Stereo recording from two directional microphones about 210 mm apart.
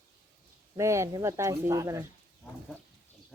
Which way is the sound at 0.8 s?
15° right (ahead or behind).